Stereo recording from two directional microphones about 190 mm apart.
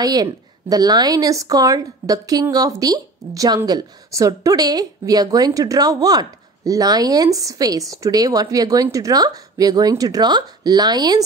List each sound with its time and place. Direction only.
0.0 s speech: 20° right (ahead or behind)